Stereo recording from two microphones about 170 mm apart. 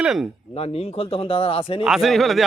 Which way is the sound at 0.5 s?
35° left (ahead or behind).